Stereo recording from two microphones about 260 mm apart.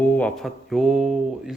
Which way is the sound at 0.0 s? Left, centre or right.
Centre.